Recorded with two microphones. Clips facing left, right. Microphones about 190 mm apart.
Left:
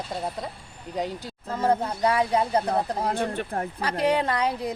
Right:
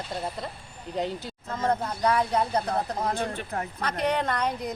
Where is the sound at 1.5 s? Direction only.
30° left (ahead or behind).